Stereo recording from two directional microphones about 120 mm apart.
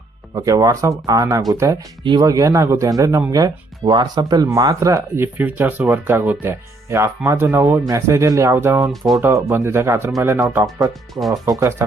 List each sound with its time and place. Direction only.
0.3 s speech: 30° right (ahead or behind)
8.9 s speech: centre (ahead or behind)
9.2 s speech: 20° right (ahead or behind)
11.1 s speech: centre (ahead or behind)
11.8 s speech: 20° right (ahead or behind)